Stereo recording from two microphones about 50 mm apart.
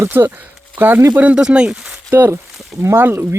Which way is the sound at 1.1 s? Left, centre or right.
Right.